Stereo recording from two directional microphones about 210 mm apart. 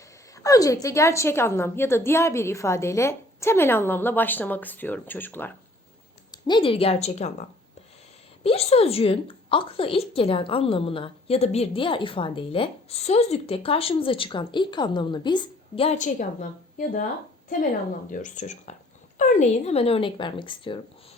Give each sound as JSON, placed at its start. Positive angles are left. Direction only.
{"t": 0.3, "sound": "a woman's voice", "side_deg": 15}
{"t": 6.3, "sound": "a woman's voice", "side_deg": 25}
{"t": 8.4, "sound": "a woman's voice", "side_deg": 30}
{"t": 18.1, "sound": "a woman's voice", "side_deg": 35}